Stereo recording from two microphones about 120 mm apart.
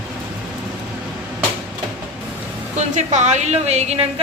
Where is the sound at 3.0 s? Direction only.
75° right (ahead or behind).